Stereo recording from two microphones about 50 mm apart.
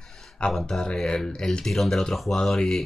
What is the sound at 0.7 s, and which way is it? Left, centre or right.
Speech, centre.